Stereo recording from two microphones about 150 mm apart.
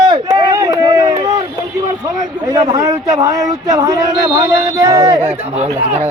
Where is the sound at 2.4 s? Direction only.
25° right (ahead or behind).